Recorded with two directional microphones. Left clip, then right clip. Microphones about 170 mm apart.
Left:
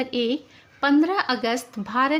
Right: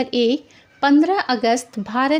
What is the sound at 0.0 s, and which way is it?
A woman's voice, 30° right (ahead or behind).